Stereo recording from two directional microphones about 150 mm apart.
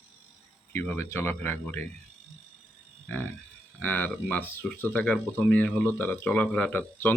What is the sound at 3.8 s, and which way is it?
Speech, 10° left (ahead or behind).